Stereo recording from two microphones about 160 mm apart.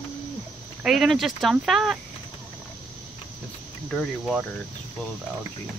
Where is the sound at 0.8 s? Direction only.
Centre (ahead or behind).